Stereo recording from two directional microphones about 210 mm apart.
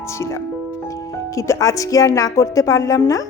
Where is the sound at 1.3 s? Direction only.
15° left (ahead or behind).